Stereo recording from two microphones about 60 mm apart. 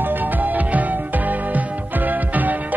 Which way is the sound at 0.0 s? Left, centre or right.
Right.